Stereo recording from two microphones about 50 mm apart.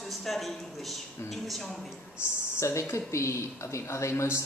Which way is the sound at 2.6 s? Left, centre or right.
Left.